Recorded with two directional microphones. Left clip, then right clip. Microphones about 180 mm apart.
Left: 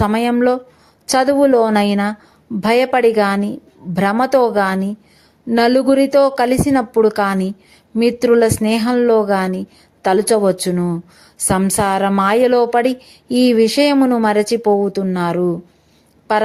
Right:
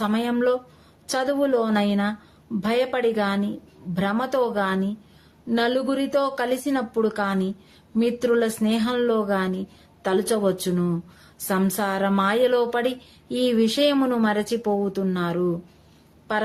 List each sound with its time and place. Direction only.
0.0 s speech: 40° left (ahead or behind)